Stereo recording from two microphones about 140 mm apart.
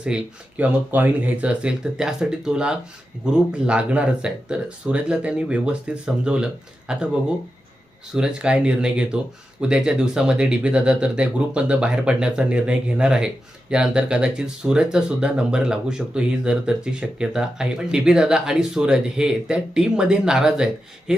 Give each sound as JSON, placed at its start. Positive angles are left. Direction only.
{"t": 0.0, "sound": "speech", "side_deg": -10}